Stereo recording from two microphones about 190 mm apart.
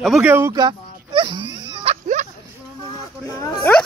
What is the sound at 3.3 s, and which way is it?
Speech, 20° left (ahead or behind).